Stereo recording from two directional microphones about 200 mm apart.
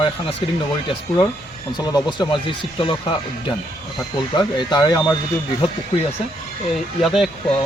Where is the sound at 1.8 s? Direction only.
20° left (ahead or behind).